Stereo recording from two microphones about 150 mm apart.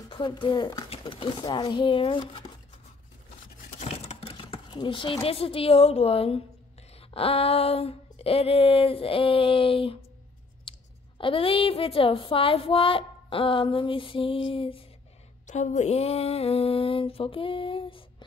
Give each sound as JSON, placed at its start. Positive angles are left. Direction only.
{"t": 0.1, "sound": "speech", "side_deg": 30}
{"t": 3.8, "sound": "a sound", "side_deg": 45}
{"t": 4.7, "sound": "speech", "side_deg": 35}
{"t": 11.1, "sound": "speech", "side_deg": 35}
{"t": 15.4, "sound": "speech", "side_deg": 50}